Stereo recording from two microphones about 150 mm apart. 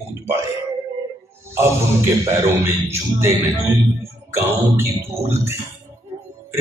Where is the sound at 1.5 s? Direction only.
20° right (ahead or behind).